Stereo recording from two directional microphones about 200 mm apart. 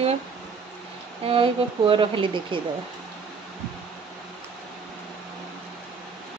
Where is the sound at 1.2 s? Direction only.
25° right (ahead or behind).